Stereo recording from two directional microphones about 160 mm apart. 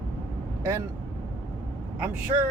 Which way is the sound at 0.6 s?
15° right (ahead or behind).